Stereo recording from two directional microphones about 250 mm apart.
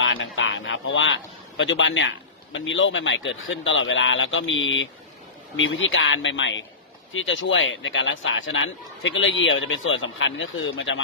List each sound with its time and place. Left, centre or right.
0.0 s a man's voice: left